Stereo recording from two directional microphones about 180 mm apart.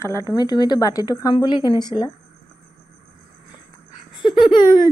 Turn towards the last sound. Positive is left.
turn(degrees=30)  # may be behind; listen again after turning